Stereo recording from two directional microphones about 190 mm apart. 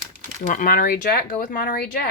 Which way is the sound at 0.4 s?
45° left (ahead or behind).